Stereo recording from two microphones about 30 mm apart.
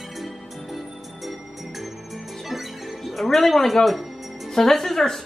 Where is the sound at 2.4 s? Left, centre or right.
Centre.